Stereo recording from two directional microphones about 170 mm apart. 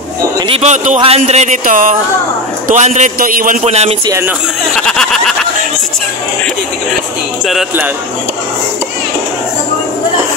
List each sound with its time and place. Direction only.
0.5 s speech: 40° right (ahead or behind)
3.6 s a man's voice: 40° right (ahead or behind)
4.7 s a sound: 5° left (ahead or behind)
7.4 s speech: 5° right (ahead or behind)